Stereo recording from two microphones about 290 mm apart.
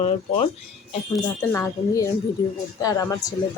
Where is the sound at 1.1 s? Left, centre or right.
Centre.